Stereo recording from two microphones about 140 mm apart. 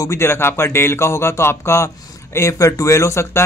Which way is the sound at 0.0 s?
20° left (ahead or behind).